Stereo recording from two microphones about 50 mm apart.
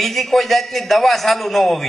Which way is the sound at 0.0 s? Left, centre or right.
Centre.